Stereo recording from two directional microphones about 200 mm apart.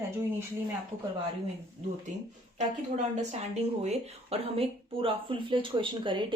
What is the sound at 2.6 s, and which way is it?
A woman's voice, 35° right (ahead or behind).